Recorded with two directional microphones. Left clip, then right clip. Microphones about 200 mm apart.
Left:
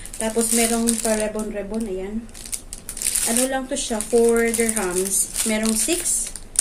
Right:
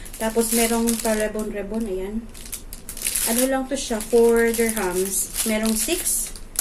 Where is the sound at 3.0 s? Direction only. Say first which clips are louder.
Even; 5° left (ahead or behind).